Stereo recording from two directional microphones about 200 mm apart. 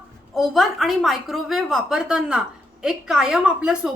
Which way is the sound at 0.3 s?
Centre (ahead or behind).